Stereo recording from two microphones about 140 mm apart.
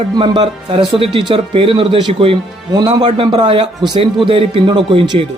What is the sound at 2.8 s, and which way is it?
A man's voice, 30° right (ahead or behind).